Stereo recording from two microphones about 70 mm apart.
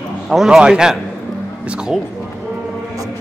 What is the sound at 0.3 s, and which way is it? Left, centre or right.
Speech, centre.